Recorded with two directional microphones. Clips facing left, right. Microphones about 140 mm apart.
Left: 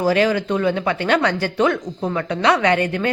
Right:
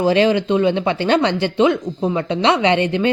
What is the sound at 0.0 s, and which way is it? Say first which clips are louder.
Speech: right 3 dB; 25° right (ahead or behind).